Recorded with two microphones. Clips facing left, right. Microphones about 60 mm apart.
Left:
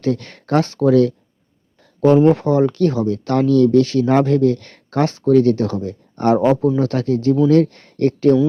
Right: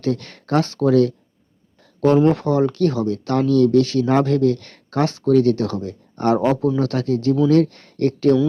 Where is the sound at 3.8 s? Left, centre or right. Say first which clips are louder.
Left 2 dB; left.